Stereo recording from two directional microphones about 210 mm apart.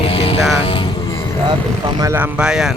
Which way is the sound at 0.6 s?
25° left (ahead or behind).